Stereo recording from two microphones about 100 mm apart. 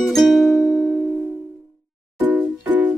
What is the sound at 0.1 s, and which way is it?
Music, centre (ahead or behind).